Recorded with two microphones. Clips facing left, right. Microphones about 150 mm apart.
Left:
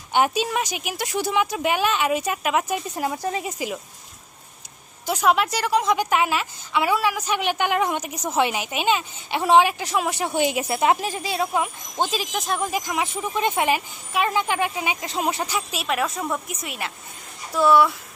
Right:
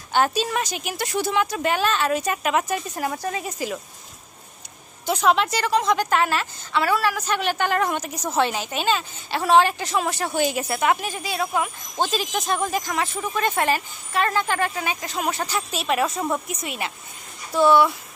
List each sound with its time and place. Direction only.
0.1 s a woman's voice: 15° left (ahead or behind)
5.0 s a woman's voice: 5° left (ahead or behind)
15.5 s a woman's voice: centre (ahead or behind)